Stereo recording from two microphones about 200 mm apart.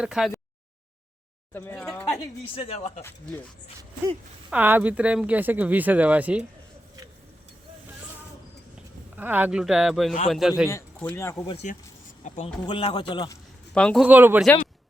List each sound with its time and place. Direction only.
0.0 s speech: 5° right (ahead or behind)
1.5 s speech: 10° left (ahead or behind)
2.6 s speech: 30° left (ahead or behind)
4.4 s speech: 10° right (ahead or behind)
9.1 s speech: 10° right (ahead or behind)
10.7 s speech: 15° left (ahead or behind)
11.4 s speech: 35° left (ahead or behind)
12.6 s a man's voice: 25° left (ahead or behind)
13.7 s speech: 5° left (ahead or behind)